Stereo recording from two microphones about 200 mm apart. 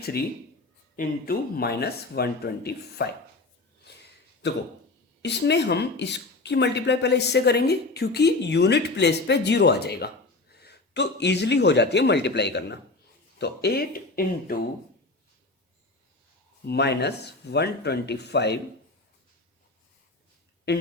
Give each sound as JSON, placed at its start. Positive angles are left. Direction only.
{"t": 0.9, "sound": "speech", "side_deg": 50}
{"t": 5.2, "sound": "speech", "side_deg": 60}
{"t": 16.6, "sound": "speech", "side_deg": 55}
{"t": 20.7, "sound": "speech", "side_deg": 55}